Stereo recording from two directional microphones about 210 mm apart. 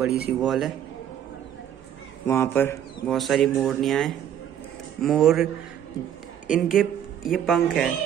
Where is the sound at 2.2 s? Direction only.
10° left (ahead or behind).